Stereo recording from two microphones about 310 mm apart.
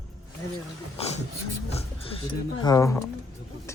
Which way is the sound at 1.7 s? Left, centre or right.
Centre.